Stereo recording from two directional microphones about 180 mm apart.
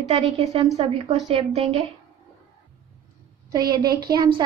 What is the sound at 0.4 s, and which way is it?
A woman's voice, 35° right (ahead or behind).